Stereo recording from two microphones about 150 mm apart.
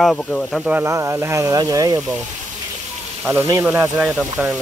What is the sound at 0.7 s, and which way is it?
Speech, 15° right (ahead or behind).